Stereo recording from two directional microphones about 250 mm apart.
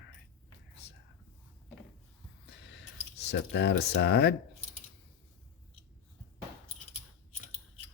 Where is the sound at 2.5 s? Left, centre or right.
Left.